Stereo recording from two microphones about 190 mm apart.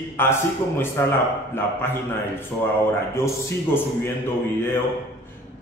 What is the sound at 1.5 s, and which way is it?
Speech, 10° left (ahead or behind).